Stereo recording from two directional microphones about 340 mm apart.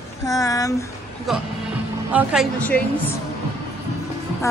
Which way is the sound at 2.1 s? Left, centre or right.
Centre.